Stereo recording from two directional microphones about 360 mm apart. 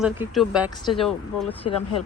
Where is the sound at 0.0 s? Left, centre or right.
Centre.